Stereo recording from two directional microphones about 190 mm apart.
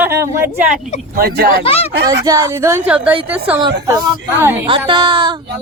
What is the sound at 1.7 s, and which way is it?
Speech, 30° left (ahead or behind).